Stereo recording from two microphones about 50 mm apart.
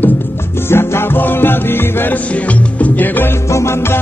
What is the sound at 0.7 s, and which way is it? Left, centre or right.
Music, left.